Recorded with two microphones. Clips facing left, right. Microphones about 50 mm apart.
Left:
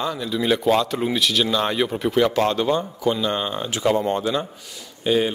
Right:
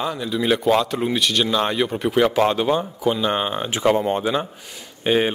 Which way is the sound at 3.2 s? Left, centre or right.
Right.